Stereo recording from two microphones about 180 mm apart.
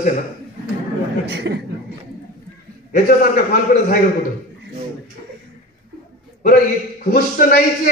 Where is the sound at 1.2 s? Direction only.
65° right (ahead or behind).